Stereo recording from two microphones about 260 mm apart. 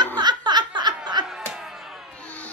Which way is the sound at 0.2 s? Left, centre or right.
Centre.